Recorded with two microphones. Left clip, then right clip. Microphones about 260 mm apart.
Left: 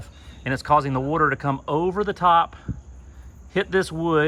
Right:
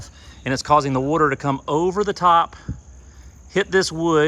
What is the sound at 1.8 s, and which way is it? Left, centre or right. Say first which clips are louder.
Speech: right 2 dB; centre.